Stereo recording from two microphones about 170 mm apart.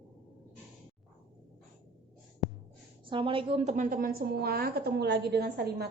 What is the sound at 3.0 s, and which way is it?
A woman's voice, 30° right (ahead or behind).